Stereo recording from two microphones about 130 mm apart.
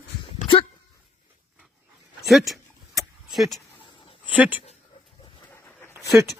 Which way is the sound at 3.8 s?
40° left (ahead or behind).